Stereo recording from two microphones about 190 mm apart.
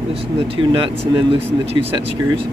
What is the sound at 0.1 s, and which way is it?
Speech, 30° right (ahead or behind).